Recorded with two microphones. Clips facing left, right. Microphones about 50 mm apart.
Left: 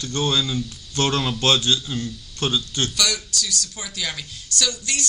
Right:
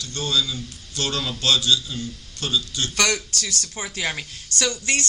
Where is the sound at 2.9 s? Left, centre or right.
Right.